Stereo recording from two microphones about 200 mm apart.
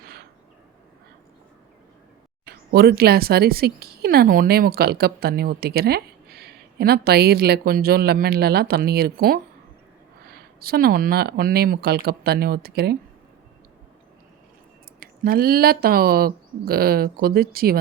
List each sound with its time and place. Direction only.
2.4 s speech: 50° right (ahead or behind)
15.0 s speech: 50° right (ahead or behind)